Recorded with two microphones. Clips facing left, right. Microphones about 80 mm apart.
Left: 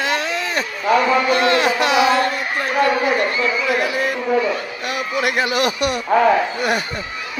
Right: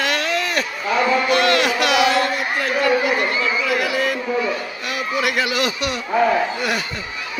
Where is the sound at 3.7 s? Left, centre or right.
Left.